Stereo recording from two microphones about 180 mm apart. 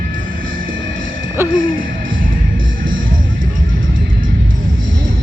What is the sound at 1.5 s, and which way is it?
Music, 50° right (ahead or behind).